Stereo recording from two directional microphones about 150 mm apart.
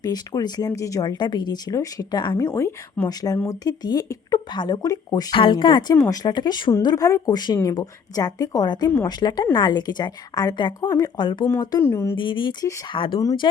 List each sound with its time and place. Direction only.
0.0 s speech: 25° left (ahead or behind)
11.8 s speech: 15° left (ahead or behind)
12.1 s speech: 30° left (ahead or behind)